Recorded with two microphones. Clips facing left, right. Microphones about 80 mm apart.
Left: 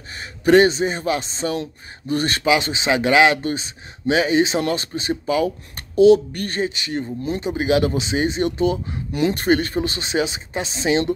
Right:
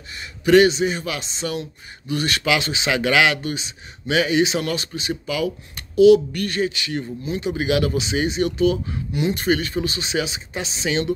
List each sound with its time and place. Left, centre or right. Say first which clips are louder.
0.1 s speech: left 1 dB; left
2.4 s speech: left 4 dB; left
9.1 s speech: left 3 dB; left